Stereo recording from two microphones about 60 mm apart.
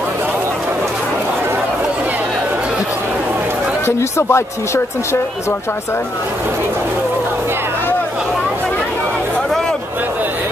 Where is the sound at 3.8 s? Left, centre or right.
Left.